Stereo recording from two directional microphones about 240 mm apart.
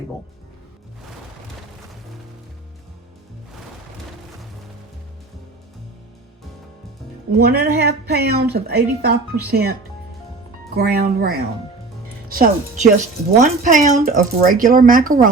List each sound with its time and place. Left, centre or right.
7.3 s a woman's voice: right
10.8 s a woman's voice: right